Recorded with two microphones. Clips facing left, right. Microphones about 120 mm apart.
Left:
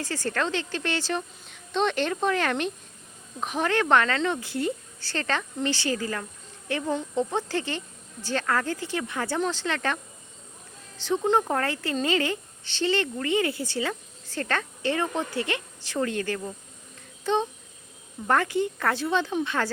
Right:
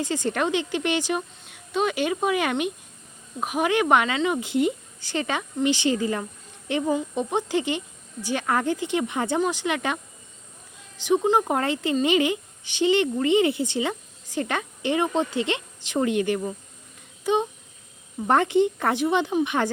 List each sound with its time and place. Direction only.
0.0 s speech: 20° right (ahead or behind)
4.4 s speech: 20° right (ahead or behind)